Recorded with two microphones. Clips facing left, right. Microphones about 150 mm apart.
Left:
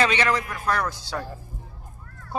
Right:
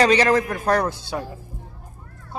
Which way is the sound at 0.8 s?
20° right (ahead or behind).